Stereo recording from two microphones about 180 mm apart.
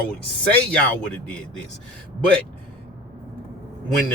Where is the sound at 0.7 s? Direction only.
5° left (ahead or behind).